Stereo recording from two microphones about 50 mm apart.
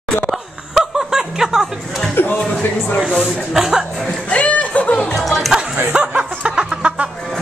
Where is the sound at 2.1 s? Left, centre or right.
Left.